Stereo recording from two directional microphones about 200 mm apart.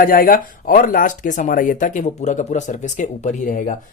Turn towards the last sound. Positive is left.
turn(degrees=40)  # may be behind; listen again after turning